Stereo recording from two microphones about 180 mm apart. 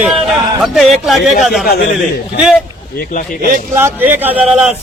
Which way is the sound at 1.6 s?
60° left (ahead or behind).